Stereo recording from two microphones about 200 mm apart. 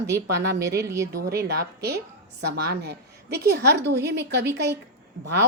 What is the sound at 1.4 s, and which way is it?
A woman's voice, 50° right (ahead or behind).